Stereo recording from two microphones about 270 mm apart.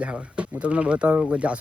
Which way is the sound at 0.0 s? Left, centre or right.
Centre.